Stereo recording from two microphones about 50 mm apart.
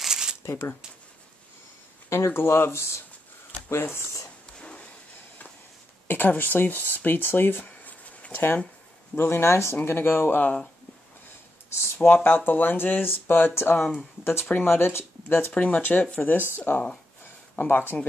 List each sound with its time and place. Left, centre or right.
0.0 s shuffling cards: centre
0.5 s speech: left
2.0 s speech: left
4.6 s a sound: left
6.0 s speech: left
9.1 s speech: left
9.8 s speech: left
11.8 s speech: left
15.5 s speech: left